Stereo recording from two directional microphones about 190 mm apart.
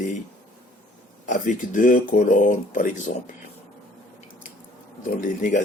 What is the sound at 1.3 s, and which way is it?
Speech, 40° left (ahead or behind).